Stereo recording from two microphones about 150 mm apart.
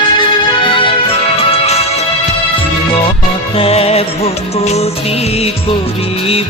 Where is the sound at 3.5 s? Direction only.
40° left (ahead or behind).